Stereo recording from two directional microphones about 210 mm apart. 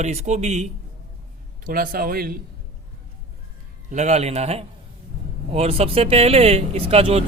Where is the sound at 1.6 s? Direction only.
45° right (ahead or behind).